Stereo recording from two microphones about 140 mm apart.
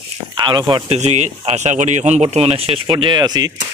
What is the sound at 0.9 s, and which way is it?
Speech, 55° right (ahead or behind).